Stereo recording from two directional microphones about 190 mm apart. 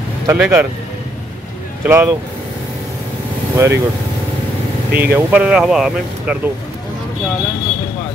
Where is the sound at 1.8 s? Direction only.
10° right (ahead or behind).